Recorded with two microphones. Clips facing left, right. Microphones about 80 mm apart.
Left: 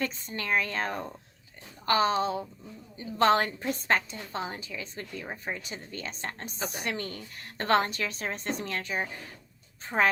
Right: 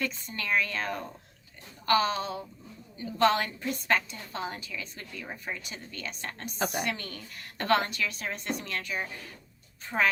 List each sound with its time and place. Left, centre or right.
0.0 s a woman's voice: left
6.6 s a woman's voice: right
6.8 s a woman's voice: left